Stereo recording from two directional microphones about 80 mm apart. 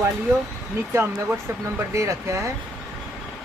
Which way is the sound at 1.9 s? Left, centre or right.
Right.